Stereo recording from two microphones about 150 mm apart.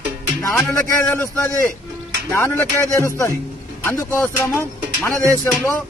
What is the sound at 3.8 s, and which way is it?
Speech, 20° left (ahead or behind).